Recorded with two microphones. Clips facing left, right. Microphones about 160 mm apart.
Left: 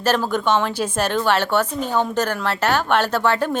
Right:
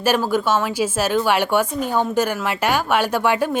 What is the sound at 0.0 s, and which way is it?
A woman's voice, 10° right (ahead or behind).